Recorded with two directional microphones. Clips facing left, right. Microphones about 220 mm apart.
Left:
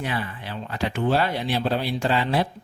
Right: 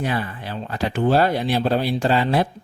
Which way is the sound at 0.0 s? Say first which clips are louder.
Right 4 dB; 40° right (ahead or behind).